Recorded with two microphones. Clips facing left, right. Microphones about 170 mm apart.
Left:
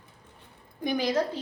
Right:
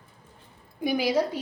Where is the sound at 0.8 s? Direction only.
10° right (ahead or behind).